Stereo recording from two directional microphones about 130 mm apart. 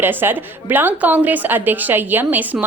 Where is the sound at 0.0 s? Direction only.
15° right (ahead or behind).